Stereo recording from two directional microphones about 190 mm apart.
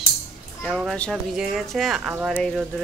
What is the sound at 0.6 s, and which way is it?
A woman's voice, centre (ahead or behind).